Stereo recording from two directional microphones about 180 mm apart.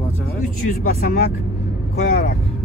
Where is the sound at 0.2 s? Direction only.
50° left (ahead or behind).